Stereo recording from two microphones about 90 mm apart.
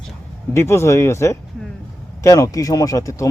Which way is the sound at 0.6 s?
30° left (ahead or behind).